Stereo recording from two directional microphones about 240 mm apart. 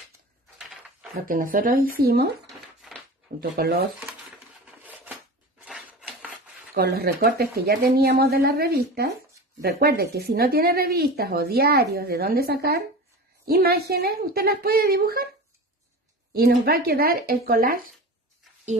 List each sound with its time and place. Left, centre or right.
1.2 s speech: right
3.4 s speech: right
4.6 s a sound: centre
5.7 s rub: centre
6.7 s speech: right
16.3 s speech: right